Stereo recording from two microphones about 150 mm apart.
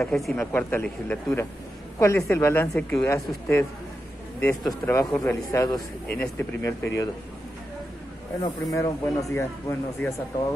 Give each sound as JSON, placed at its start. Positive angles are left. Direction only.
{"t": 0.0, "sound": "speech", "side_deg": 5}
{"t": 0.4, "sound": "a man's voice", "side_deg": 15}
{"t": 4.8, "sound": "a man's voice", "side_deg": 15}
{"t": 6.1, "sound": "a man's voice", "side_deg": 10}
{"t": 6.6, "sound": "speech", "side_deg": 20}
{"t": 8.4, "sound": "speech", "side_deg": 25}